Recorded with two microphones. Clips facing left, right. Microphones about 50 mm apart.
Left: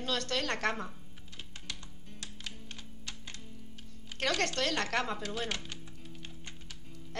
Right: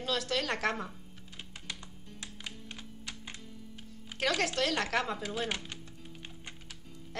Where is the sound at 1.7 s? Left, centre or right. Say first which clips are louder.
Right 2 dB; centre.